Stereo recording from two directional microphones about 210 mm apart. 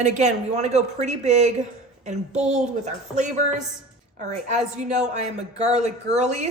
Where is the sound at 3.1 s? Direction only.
35° right (ahead or behind).